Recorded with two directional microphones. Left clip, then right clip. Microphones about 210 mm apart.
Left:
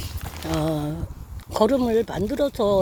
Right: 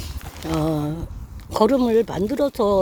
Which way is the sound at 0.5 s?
15° right (ahead or behind).